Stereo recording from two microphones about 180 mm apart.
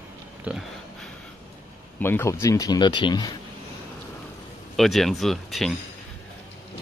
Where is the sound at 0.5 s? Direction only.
10° right (ahead or behind).